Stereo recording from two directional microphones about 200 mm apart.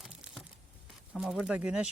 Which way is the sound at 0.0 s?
5° right (ahead or behind).